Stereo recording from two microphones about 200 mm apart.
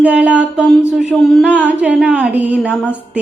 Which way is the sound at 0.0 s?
5° right (ahead or behind).